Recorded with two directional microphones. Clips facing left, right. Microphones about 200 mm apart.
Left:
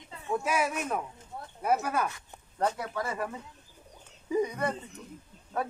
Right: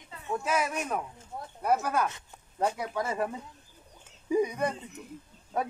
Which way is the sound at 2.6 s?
10° right (ahead or behind).